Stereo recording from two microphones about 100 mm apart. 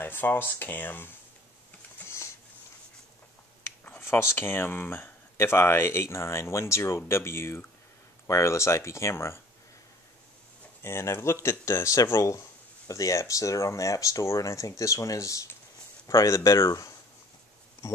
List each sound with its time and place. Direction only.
0.0 s speech: 20° left (ahead or behind)
2.0 s a sound: 25° left (ahead or behind)
3.8 s speech: 20° left (ahead or behind)
10.8 s speech: 25° left (ahead or behind)